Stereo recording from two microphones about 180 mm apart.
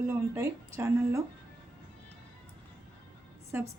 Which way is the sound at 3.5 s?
15° right (ahead or behind).